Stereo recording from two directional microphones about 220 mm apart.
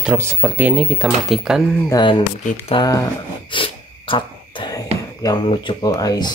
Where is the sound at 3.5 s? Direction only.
20° left (ahead or behind).